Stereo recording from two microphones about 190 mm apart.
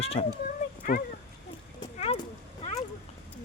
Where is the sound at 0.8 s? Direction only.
45° left (ahead or behind).